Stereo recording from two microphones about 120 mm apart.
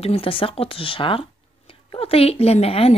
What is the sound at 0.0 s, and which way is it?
Speech, 55° left (ahead or behind).